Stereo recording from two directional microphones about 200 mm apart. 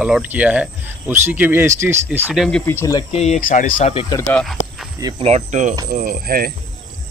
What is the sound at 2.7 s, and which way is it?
Speech, 15° left (ahead or behind).